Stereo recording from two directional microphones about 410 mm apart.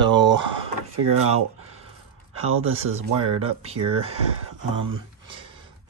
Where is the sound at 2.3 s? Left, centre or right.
Right.